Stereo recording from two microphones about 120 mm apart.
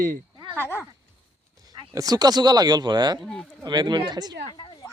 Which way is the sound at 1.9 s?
30° right (ahead or behind).